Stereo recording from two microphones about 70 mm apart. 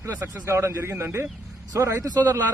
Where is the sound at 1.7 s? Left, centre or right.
Right.